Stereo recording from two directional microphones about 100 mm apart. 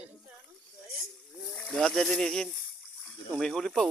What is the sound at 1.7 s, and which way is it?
A man's voice, 5° left (ahead or behind).